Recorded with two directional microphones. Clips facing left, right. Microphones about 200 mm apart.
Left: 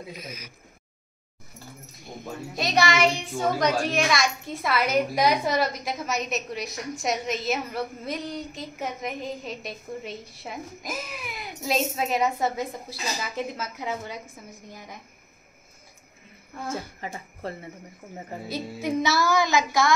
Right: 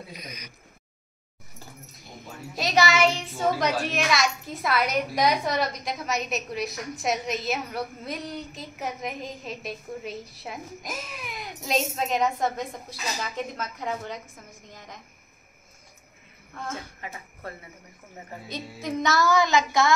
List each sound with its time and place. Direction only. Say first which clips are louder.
0.2 s a child's voice: left 2 dB; 5° left (ahead or behind)
2.5 s a child's voice: right 1 dB; centre (ahead or behind)
17.0 s speech: left 4 dB; 30° left (ahead or behind)
18.5 s a woman's voice: left 4 dB; 5° left (ahead or behind)